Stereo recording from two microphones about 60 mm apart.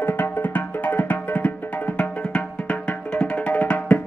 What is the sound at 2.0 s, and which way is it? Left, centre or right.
Music, centre.